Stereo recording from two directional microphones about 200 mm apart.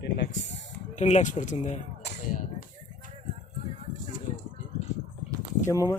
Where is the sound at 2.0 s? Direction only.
50° left (ahead or behind).